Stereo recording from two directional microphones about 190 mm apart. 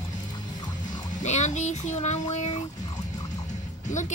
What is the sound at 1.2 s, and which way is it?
A woman's voice, 40° left (ahead or behind).